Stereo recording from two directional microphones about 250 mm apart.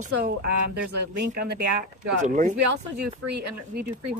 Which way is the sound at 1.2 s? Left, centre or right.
Right.